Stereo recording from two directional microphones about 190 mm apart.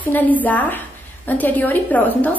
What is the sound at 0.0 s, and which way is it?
A woman's voice, 10° left (ahead or behind).